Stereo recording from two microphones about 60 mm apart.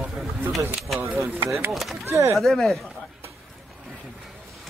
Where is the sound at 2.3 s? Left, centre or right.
Centre.